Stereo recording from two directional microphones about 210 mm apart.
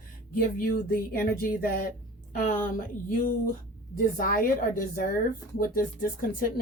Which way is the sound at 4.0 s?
40° left (ahead or behind).